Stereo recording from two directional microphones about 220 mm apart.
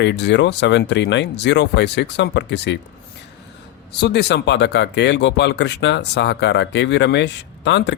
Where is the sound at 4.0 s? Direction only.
50° left (ahead or behind).